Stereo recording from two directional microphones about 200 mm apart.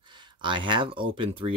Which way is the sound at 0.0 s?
25° right (ahead or behind).